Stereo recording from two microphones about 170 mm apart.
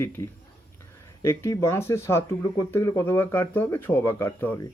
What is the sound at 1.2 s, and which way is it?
A man's voice, 15° left (ahead or behind).